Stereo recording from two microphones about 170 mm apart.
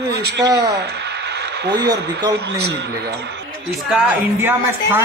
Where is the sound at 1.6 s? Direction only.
90° right.